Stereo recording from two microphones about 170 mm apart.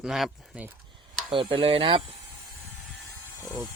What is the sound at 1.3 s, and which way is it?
Speech, 30° right (ahead or behind).